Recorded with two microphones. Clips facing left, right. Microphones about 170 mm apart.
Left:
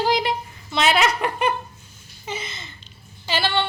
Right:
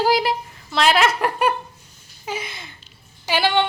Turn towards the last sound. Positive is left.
turn(degrees=-15)  # may be behind; listen again after turning